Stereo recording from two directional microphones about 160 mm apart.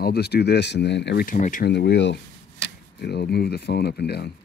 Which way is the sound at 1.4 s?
55° left (ahead or behind).